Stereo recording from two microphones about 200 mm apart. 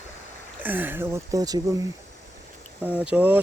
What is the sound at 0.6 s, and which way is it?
Speech, 10° right (ahead or behind).